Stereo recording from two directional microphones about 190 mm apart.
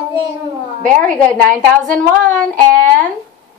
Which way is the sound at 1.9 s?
5° left (ahead or behind).